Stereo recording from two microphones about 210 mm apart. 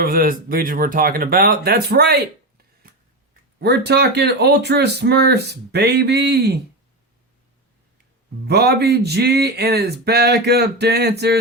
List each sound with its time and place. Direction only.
0.0 s speech: 45° right (ahead or behind)
3.6 s speech: 50° right (ahead or behind)
8.4 s speech: 50° right (ahead or behind)